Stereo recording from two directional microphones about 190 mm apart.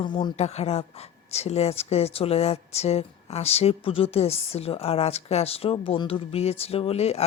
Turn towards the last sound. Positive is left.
turn(degrees=35)  # may be behind; listen again after turning